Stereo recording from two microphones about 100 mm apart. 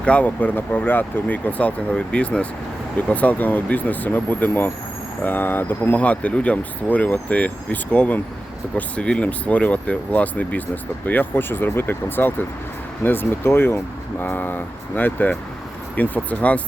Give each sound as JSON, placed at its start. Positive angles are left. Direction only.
{"t": 0.0, "sound": "speech", "side_deg": 10}